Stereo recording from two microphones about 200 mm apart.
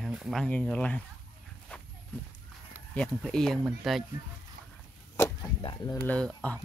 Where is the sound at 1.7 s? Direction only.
5° left (ahead or behind).